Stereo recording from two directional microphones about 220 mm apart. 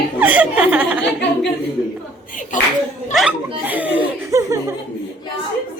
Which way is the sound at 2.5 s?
35° left (ahead or behind).